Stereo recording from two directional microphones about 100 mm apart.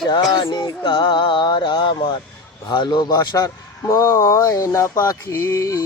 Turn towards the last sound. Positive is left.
turn(degrees=30)  # may be behind; listen again after turning